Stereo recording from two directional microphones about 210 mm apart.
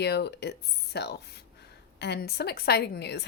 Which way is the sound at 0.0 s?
50° left (ahead or behind).